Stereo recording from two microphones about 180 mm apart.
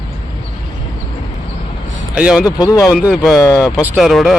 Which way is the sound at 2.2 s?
5° right (ahead or behind).